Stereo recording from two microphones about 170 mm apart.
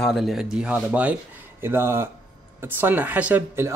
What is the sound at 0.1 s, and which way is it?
Speech, centre (ahead or behind).